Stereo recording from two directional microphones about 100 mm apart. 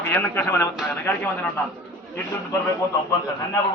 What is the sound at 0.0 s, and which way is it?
Speech, 20° left (ahead or behind).